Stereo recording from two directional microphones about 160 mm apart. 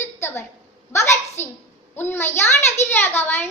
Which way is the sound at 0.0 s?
15° left (ahead or behind).